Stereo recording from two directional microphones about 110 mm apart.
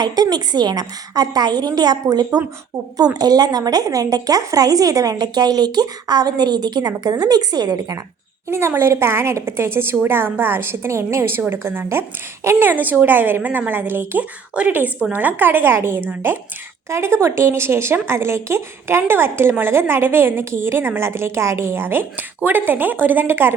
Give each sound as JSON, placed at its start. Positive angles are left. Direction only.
{"t": 0.0, "sound": "speech", "side_deg": -40}
{"t": 8.4, "sound": "a woman's voice", "side_deg": -25}